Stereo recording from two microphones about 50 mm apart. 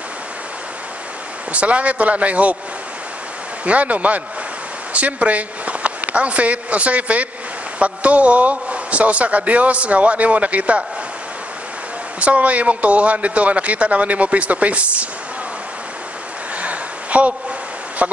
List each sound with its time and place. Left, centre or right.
1.5 s a man's voice: right
3.6 s a man's voice: right
12.2 s a man's voice: right
16.6 s a sound: right